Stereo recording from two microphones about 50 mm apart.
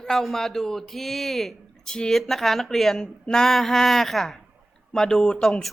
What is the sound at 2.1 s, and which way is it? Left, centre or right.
A woman's voice, centre.